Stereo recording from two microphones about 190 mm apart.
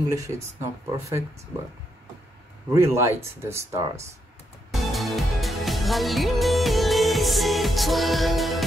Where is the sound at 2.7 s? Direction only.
15° right (ahead or behind).